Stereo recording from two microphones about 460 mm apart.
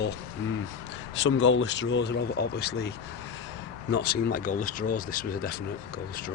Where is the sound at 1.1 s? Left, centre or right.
Left.